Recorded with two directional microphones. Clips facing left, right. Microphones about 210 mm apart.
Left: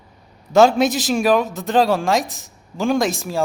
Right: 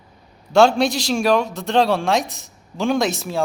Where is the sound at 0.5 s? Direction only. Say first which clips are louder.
Left 1 dB; 5° left (ahead or behind).